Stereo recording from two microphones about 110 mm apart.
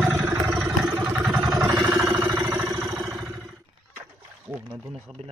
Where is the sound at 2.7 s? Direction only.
30° right (ahead or behind).